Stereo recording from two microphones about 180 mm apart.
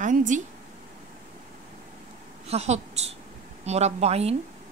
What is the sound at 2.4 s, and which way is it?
Speech, 35° right (ahead or behind).